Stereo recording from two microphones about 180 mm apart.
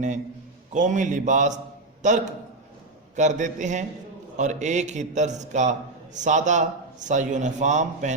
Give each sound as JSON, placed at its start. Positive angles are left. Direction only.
{"t": 0.7, "sound": "a man's voice", "side_deg": -45}